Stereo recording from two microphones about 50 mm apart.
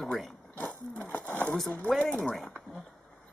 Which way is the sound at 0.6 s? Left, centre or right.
Left.